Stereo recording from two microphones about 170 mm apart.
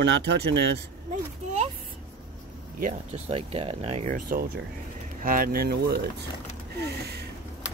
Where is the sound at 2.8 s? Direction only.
40° right (ahead or behind); by 6.0 s 65° right (ahead or behind).